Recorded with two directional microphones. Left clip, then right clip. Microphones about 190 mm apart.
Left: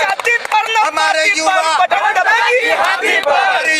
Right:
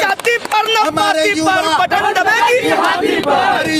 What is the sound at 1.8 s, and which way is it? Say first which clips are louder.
Chatter: left 1 dB; 60° right (ahead or behind).